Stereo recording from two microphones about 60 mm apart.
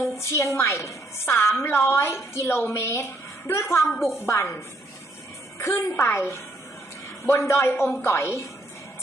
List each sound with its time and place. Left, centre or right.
0.0 s a woman's voice: left
5.5 s a child's voice: left